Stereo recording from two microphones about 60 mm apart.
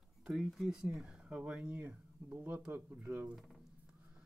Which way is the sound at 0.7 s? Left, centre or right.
Centre.